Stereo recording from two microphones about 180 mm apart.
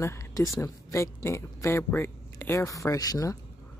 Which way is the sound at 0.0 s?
15° left (ahead or behind).